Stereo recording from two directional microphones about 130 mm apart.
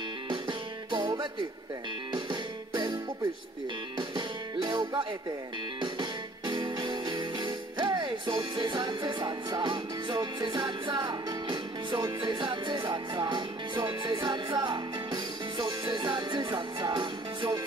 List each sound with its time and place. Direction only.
0.3 s music: 35° right (ahead or behind)
2.7 s music: 35° right (ahead or behind)
4.1 s music: 35° right (ahead or behind)